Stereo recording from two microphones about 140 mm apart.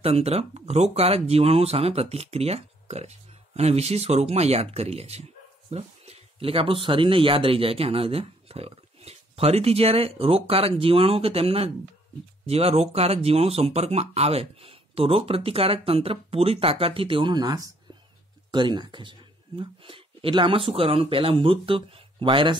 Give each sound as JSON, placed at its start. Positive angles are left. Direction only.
{"t": 0.0, "sound": "speech", "side_deg": -45}